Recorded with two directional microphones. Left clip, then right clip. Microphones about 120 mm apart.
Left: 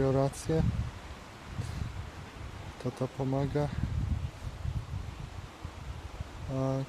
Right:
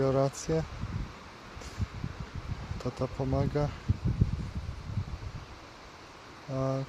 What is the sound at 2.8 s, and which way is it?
Speech, 15° left (ahead or behind).